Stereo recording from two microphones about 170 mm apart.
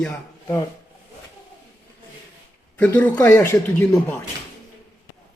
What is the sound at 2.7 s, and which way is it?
Speech, 10° left (ahead or behind).